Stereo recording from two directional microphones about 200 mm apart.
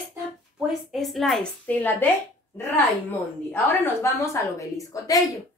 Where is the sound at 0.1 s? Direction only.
Centre (ahead or behind).